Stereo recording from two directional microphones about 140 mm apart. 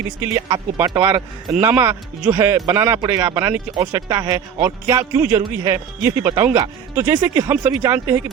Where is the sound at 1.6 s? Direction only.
15° right (ahead or behind).